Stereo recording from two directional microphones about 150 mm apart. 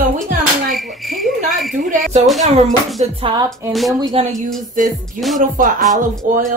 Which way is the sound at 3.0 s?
35° right (ahead or behind).